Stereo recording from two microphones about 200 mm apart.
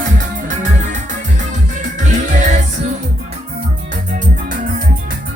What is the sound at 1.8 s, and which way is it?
Music, 35° right (ahead or behind).